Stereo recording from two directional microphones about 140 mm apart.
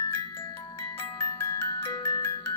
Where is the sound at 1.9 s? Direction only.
20° left (ahead or behind).